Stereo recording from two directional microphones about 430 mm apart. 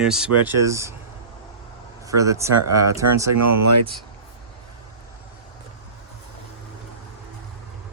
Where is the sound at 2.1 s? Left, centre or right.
Centre.